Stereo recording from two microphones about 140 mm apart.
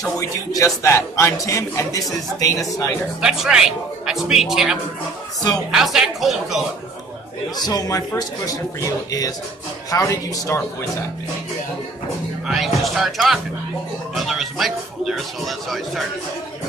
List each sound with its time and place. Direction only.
0.2 s a man's voice: 25° left (ahead or behind)
3.2 s speech: 5° right (ahead or behind)
7.5 s a man's voice: 30° left (ahead or behind)
12.4 s speech: centre (ahead or behind)